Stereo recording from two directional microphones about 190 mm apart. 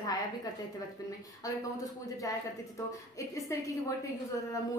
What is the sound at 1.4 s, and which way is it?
Speech, 20° left (ahead or behind).